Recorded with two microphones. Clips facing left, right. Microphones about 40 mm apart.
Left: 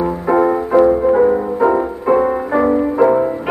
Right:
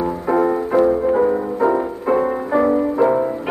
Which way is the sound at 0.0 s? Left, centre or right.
Centre.